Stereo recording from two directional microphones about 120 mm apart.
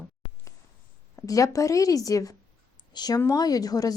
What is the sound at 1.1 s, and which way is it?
A woman's voice, 30° left (ahead or behind).